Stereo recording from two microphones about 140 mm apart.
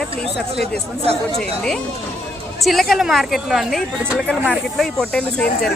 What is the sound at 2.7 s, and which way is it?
Speech, centre (ahead or behind).